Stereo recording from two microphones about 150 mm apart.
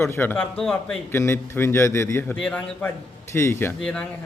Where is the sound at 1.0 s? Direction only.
15° left (ahead or behind).